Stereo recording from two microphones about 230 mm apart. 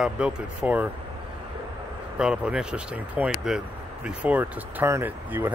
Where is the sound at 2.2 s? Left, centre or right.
Centre.